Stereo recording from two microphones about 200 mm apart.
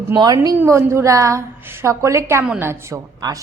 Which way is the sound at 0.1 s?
15° right (ahead or behind).